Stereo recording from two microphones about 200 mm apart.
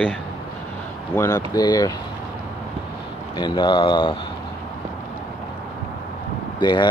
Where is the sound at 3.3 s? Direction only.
20° left (ahead or behind).